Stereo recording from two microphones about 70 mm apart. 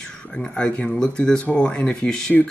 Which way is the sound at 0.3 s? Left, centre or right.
Centre.